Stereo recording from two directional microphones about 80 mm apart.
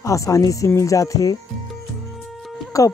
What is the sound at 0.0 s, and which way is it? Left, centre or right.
Speech, left.